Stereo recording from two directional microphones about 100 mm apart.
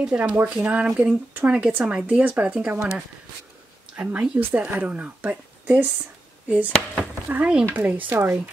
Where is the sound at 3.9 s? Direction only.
10° right (ahead or behind).